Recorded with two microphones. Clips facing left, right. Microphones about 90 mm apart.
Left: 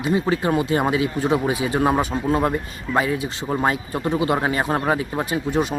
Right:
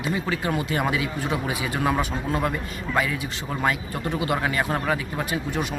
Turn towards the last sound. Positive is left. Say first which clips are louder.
# left 5 dB
turn(degrees=30)  # may be behind; listen again after turning